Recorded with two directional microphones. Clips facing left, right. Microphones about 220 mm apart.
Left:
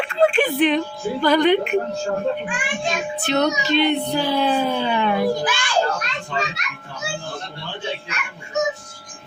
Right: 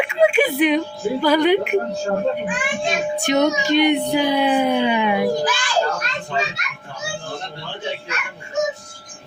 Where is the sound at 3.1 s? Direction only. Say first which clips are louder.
Right 2 dB; 15° right (ahead or behind).